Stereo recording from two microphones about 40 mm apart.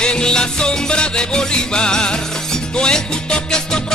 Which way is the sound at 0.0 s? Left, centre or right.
Left.